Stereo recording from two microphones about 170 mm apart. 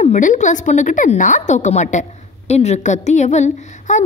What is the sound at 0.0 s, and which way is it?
A woman's voice, 45° left (ahead or behind).